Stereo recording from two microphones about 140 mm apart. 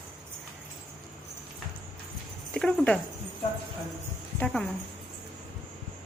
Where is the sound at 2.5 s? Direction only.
5° left (ahead or behind).